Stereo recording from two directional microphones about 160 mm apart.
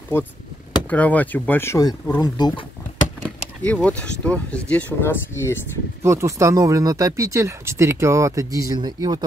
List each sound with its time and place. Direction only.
0.1 s speech: 15° left (ahead or behind)
3.6 s speech: 5° left (ahead or behind)
6.0 s speech: 20° right (ahead or behind)